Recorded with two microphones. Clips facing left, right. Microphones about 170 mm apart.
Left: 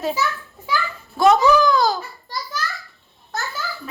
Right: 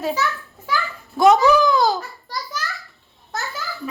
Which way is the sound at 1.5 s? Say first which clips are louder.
Even; 20° right (ahead or behind).